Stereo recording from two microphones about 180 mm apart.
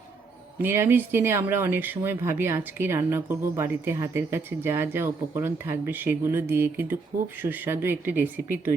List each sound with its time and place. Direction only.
0.6 s speech: 10° right (ahead or behind)